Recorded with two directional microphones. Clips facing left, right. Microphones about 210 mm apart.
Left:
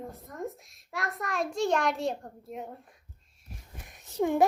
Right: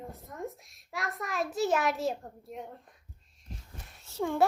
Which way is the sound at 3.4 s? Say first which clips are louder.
Right 1 dB; 15° left (ahead or behind).